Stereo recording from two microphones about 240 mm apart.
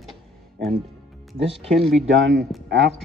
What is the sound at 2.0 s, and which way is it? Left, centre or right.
Speech, right.